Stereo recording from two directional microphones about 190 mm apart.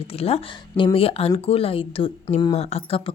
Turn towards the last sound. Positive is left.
turn(degrees=30)  # may be behind; listen again after turning